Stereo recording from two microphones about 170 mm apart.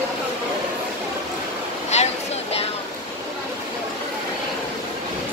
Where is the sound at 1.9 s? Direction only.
40° left (ahead or behind).